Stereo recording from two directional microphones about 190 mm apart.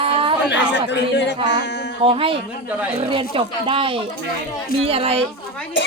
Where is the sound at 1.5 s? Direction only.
65° left (ahead or behind).